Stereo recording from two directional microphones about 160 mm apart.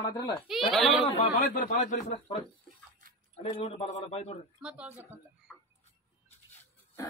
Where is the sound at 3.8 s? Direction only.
45° left (ahead or behind).